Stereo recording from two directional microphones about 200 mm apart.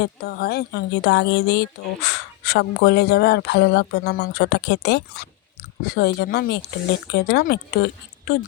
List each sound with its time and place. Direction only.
0.0 s speech: 50° left (ahead or behind)